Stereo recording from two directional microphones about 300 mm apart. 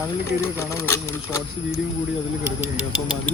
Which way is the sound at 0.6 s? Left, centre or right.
Centre.